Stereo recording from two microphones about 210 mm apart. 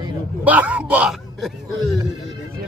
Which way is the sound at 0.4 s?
5° right (ahead or behind).